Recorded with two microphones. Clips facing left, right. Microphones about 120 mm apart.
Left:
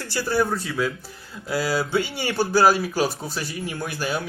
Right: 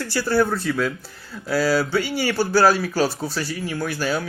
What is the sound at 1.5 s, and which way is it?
A man's voice, 20° left (ahead or behind).